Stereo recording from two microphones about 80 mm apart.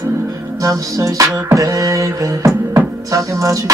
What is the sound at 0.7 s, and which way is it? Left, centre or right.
Beatboxing, right.